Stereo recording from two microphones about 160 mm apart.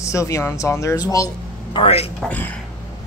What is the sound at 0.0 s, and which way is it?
Speech, 20° left (ahead or behind).